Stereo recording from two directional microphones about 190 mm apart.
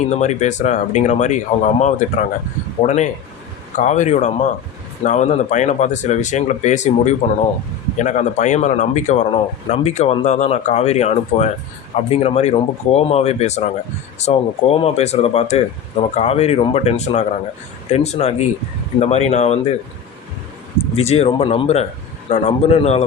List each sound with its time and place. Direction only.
0.1 s speech: 40° left (ahead or behind)
20.9 s speech: 35° left (ahead or behind)